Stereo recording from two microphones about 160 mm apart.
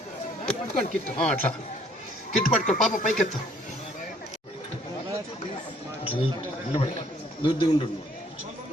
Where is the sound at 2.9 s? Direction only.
50° left (ahead or behind).